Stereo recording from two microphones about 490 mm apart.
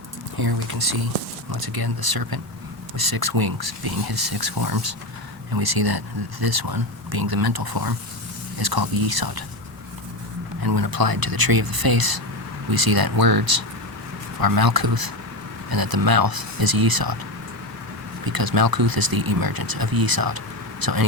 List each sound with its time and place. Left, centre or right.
0.3 s speech: right
10.6 s speech: right
18.3 s speech: right